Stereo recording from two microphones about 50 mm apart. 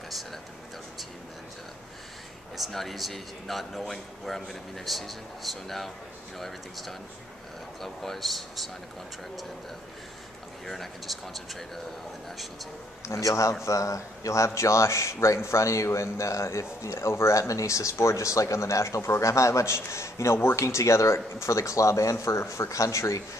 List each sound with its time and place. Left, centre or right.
2.5 s speech: centre
10.7 s speech: centre
13.0 s a man's voice: left